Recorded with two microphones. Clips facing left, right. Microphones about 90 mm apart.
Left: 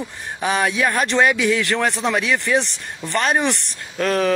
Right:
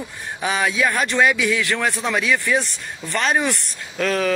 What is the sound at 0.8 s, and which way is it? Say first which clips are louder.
Speech: even; 15° left (ahead or behind).